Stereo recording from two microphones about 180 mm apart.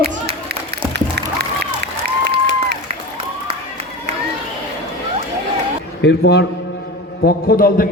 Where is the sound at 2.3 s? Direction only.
70° right (ahead or behind).